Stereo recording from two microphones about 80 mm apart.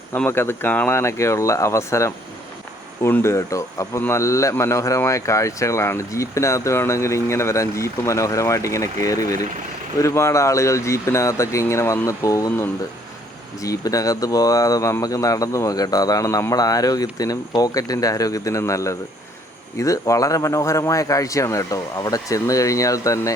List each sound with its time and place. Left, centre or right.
0.3 s speech: left
0.9 s speech: left
12.5 s speech: left
13.6 s speech: left